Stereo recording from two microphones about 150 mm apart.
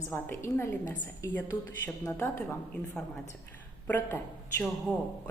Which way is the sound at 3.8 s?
15° left (ahead or behind).